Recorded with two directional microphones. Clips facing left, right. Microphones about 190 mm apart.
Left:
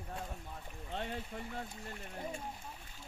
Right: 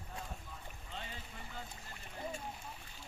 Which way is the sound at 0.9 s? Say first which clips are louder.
Left 8 dB; 65° left (ahead or behind).